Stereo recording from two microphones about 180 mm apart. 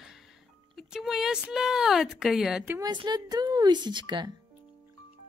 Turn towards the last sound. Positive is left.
turn(degrees=-25)  # may be behind; listen again after turning